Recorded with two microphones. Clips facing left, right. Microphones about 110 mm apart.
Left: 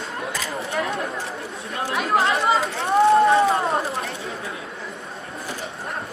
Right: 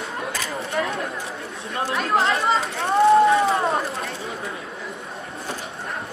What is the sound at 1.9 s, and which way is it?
Speech, centre (ahead or behind).